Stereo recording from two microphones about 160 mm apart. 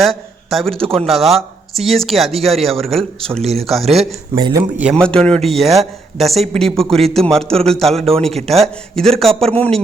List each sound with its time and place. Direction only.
0.0 s a man's voice: centre (ahead or behind)
3.4 s speech: 40° right (ahead or behind)
4.4 s a man's voice: 25° right (ahead or behind)
4.8 s a man's voice: 10° right (ahead or behind)
5.0 s speech: 5° left (ahead or behind)
8.4 s speech: 40° right (ahead or behind)
8.6 s speech: 5° left (ahead or behind)
9.3 s speech: 40° right (ahead or behind)
9.6 s speech: 5° left (ahead or behind)